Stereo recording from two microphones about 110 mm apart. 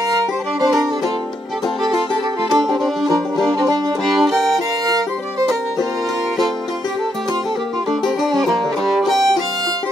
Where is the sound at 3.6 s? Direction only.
35° right (ahead or behind).